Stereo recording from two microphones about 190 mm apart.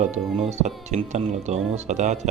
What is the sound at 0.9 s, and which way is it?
Speech, 35° right (ahead or behind).